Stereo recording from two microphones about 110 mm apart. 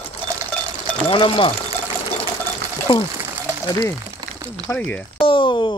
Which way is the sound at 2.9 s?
60° left (ahead or behind).